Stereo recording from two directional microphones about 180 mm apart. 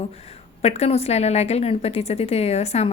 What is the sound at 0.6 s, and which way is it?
A woman's voice, 35° left (ahead or behind).